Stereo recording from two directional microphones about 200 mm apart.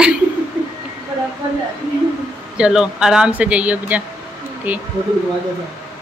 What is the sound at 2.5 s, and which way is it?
Speech, 5° right (ahead or behind).